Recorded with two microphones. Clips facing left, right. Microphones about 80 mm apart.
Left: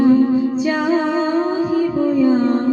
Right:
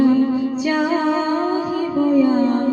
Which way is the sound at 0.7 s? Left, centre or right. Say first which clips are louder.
Right 3 dB; left.